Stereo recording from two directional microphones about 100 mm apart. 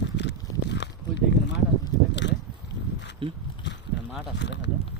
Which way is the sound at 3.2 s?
60° right (ahead or behind).